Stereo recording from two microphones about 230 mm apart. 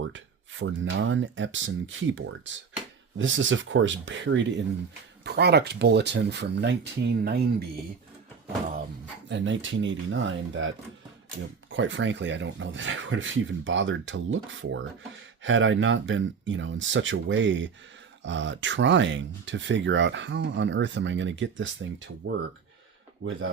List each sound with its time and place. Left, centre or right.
0.0 s speech: right
9.3 s speech: right
23.2 s speech: right